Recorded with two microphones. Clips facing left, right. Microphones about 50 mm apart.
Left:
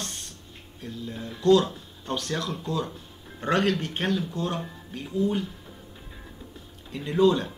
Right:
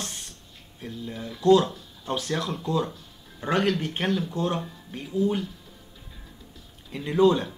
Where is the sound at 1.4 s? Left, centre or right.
Centre.